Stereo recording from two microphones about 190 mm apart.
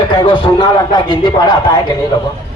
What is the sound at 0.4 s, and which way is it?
A man's voice, 25° left (ahead or behind).